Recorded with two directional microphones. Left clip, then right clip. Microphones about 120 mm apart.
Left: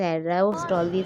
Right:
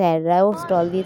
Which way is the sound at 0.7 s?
Centre (ahead or behind).